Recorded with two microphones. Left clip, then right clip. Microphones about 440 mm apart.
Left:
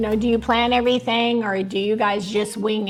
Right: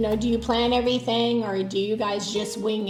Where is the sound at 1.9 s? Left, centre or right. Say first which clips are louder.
Left 5 dB; left.